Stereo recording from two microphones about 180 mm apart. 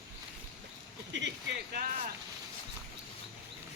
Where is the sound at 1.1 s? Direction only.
80° right.